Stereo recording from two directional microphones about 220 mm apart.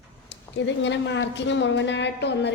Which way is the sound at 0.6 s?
55° left (ahead or behind).